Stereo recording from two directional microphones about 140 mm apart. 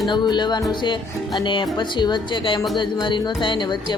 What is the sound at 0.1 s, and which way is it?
A woman's voice, 30° left (ahead or behind).